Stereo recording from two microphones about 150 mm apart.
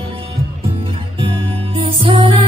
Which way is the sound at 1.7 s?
40° right (ahead or behind).